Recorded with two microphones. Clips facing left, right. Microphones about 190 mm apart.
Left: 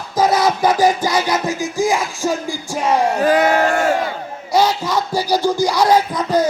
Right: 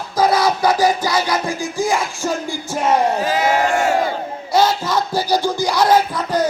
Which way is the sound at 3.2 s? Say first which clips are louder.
Left 3 dB; 55° left (ahead or behind).